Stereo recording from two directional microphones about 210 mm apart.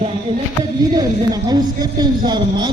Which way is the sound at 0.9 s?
20° right (ahead or behind).